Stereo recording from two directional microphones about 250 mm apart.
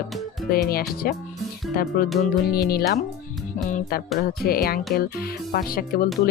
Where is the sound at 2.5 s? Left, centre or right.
Left.